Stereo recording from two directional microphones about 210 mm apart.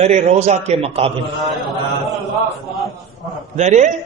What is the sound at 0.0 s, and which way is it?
A man's voice, 35° right (ahead or behind).